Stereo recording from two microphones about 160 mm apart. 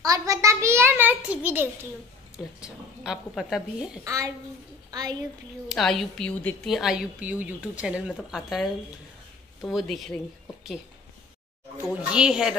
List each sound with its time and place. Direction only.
0.0 s a sound: 20° right (ahead or behind)
2.3 s a woman's voice: 5° right (ahead or behind)
4.0 s a child's voice: 20° right (ahead or behind)
5.7 s a woman's voice: centre (ahead or behind)
11.9 s a woman's voice: 5° right (ahead or behind)